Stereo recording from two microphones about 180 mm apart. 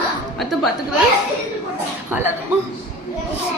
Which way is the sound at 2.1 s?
10° right (ahead or behind).